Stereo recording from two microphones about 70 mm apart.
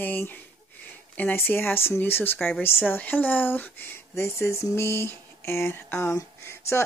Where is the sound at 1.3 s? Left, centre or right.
Left.